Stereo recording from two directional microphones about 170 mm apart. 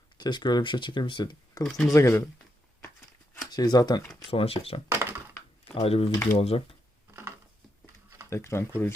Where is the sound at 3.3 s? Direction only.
25° left (ahead or behind).